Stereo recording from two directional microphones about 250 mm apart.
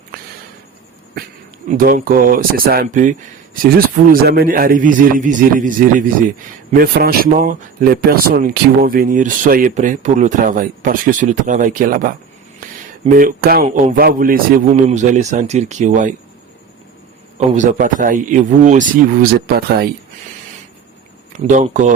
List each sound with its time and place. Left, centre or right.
1.7 s a man's voice: right
17.3 s speech: right
21.3 s a man's voice: right